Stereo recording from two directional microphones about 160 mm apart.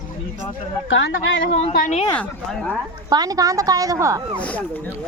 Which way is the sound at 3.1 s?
25° right (ahead or behind).